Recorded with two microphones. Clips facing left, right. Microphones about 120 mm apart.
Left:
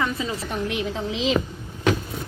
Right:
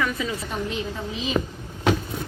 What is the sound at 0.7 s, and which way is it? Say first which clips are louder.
Speech: left 3 dB; 80° left.